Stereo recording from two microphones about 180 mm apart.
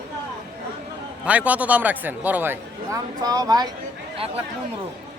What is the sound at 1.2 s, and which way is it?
A man's voice, 10° right (ahead or behind).